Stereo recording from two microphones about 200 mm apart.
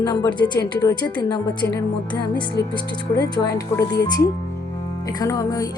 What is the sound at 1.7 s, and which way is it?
Speech, 10° left (ahead or behind).